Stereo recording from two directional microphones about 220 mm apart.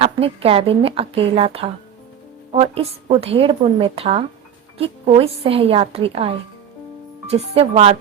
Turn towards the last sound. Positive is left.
turn(degrees=-25)  # may be behind; listen again after turning